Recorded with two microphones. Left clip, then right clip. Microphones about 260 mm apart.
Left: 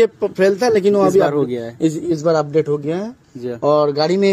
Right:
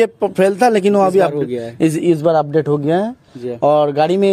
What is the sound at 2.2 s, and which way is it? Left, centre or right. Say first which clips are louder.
Speech: even; right.